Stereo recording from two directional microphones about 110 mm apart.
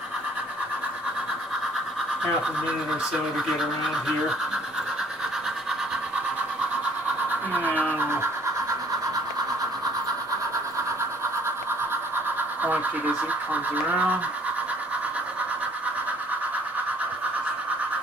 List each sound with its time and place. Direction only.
7.5 s speech: 15° right (ahead or behind)
8.0 s scratch: 20° right (ahead or behind)
12.6 s speech: 15° right (ahead or behind)